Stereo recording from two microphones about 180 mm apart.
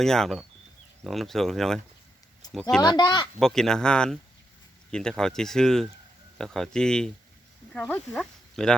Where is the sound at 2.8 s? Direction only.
25° left (ahead or behind).